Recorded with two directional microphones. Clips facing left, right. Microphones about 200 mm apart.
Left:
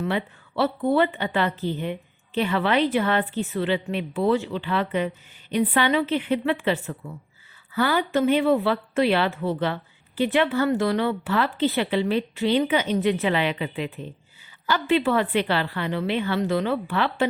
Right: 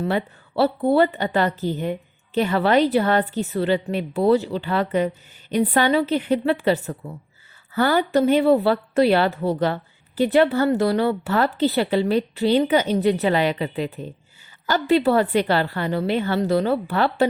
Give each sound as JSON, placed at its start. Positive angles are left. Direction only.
{"t": 0.0, "sound": "a woman's voice", "side_deg": -40}